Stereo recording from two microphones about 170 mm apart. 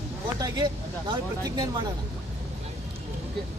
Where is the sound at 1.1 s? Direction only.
25° right (ahead or behind).